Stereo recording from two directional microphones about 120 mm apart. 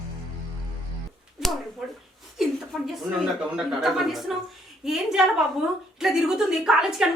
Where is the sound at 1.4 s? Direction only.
5° right (ahead or behind).